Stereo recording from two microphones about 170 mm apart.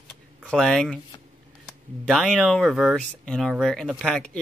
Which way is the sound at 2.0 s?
5° left (ahead or behind).